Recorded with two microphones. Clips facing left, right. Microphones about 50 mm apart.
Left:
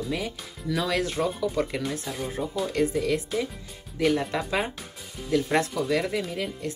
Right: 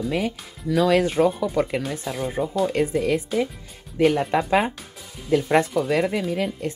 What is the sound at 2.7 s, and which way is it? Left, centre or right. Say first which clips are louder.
Speech: right 3 dB; right.